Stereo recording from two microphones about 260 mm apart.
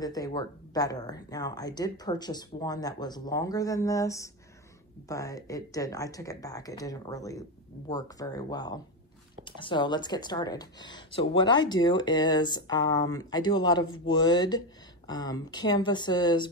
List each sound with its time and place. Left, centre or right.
0.0 s speech: centre